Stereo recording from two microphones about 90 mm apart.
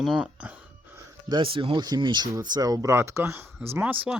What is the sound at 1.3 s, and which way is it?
Speech, 75° right (ahead or behind).